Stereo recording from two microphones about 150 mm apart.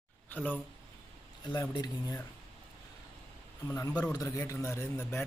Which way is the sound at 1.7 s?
25° left (ahead or behind).